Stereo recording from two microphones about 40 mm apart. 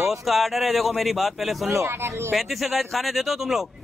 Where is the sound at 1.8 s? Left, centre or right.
Right.